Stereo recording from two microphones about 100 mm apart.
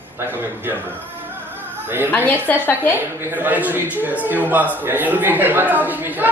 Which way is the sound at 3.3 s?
15° right (ahead or behind).